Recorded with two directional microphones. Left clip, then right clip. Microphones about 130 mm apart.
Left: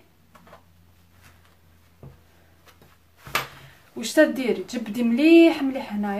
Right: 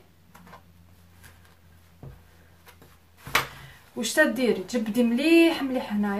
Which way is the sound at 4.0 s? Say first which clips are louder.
Left 3 dB; 40° left (ahead or behind).